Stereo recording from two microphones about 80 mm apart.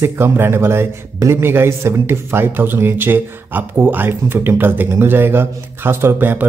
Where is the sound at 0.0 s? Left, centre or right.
Right.